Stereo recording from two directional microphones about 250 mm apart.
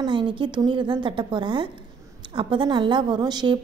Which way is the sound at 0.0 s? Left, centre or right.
Centre.